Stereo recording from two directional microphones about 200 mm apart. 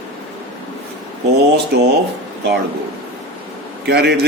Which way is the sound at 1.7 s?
55° right (ahead or behind).